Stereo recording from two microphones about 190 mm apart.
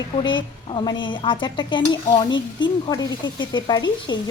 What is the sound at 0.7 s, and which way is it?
Speech, 25° left (ahead or behind).